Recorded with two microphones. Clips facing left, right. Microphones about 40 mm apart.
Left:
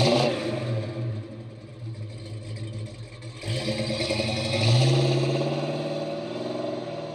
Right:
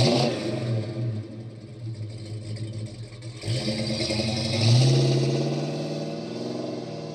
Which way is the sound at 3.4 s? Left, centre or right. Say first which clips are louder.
Even; left.